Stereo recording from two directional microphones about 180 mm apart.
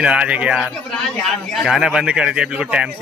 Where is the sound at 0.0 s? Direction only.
5° right (ahead or behind).